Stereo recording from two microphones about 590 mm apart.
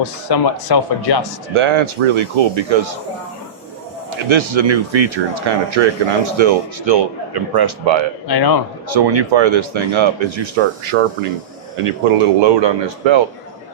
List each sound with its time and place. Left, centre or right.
0.0 s speech: left
1.5 s speech: right
4.3 s speech: right
8.3 s speech: left
8.9 s speech: right